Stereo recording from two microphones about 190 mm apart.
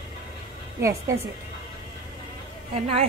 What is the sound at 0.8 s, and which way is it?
Speech, 15° right (ahead or behind).